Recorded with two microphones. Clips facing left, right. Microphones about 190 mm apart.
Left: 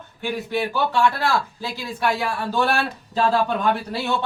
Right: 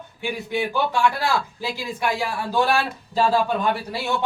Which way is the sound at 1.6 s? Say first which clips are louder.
Even; 15° right (ahead or behind).